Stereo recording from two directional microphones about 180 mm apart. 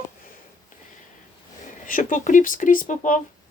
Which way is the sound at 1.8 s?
50° left (ahead or behind).